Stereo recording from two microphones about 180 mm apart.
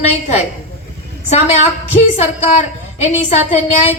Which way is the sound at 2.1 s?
35° left (ahead or behind).